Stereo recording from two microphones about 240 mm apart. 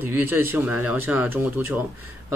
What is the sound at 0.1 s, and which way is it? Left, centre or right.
Speech, centre.